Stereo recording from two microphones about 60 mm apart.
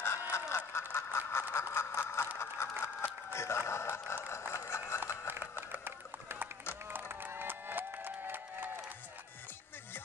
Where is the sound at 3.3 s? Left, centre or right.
Left.